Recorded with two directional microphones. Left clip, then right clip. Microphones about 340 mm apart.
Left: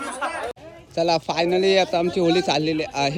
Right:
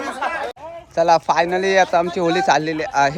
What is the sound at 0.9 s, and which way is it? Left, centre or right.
A man's voice, centre.